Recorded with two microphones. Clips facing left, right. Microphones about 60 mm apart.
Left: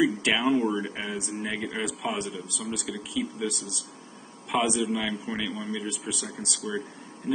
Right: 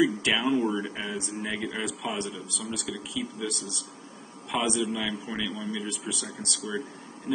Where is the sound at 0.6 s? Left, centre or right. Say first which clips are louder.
Left 1 dB; left.